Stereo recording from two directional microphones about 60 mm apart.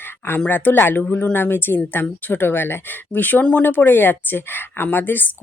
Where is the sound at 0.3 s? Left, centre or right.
Left.